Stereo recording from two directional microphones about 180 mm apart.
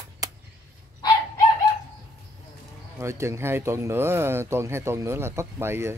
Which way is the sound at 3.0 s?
15° right (ahead or behind).